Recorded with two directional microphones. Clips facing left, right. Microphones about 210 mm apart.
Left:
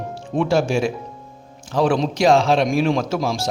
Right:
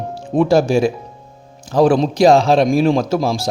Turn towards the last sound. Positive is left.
turn(degrees=-35)  # may be behind; listen again after turning